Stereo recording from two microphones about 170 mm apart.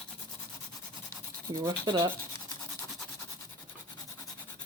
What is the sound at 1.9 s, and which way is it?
Speech, 25° right (ahead or behind).